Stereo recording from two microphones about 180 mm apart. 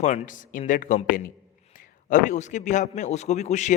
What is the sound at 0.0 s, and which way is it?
A man's voice, 40° left (ahead or behind).